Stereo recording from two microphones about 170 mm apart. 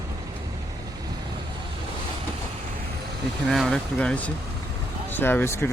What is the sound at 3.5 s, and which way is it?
Speech, centre (ahead or behind).